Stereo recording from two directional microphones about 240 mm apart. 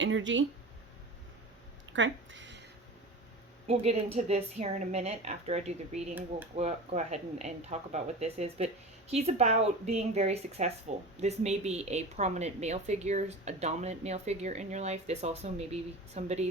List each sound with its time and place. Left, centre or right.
0.0 s speech: right
1.9 s a sound: right
3.7 s a woman's voice: right